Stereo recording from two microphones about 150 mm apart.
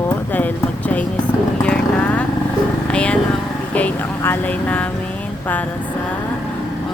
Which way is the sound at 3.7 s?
10° left (ahead or behind).